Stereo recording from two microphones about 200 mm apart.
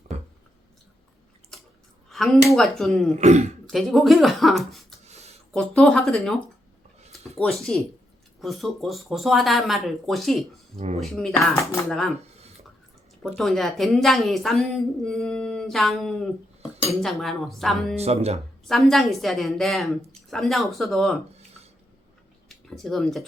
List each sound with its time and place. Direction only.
2.0 s a woman's voice: centre (ahead or behind)
3.2 s speech: 35° right (ahead or behind)
3.7 s a woman's voice: centre (ahead or behind)
5.0 s a sound: 30° right (ahead or behind)
5.5 s a woman's voice: 5° left (ahead or behind)
10.8 s speech: 35° right (ahead or behind)
11.0 s a woman's voice: centre (ahead or behind)
11.6 s speech: 15° left (ahead or behind)
11.9 s a woman's voice: centre (ahead or behind)
13.2 s a woman's voice: centre (ahead or behind)
17.9 s speech: 30° right (ahead or behind)
18.7 s a woman's voice: centre (ahead or behind)
22.4 s a sound: centre (ahead or behind)